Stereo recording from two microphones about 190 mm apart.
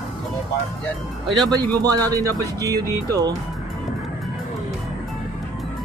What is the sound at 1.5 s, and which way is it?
Speech, 20° right (ahead or behind).